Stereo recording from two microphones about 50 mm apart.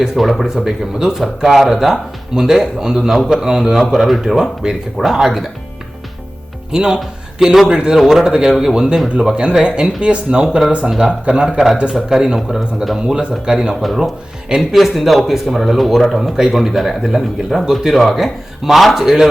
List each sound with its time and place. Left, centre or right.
0.0 s speech: centre
6.7 s a man's voice: centre
12.5 s speech: centre
13.0 s speech: centre
14.8 s speech: centre